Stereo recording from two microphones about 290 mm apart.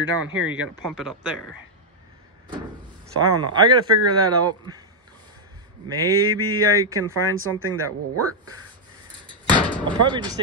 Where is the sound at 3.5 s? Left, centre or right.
Centre.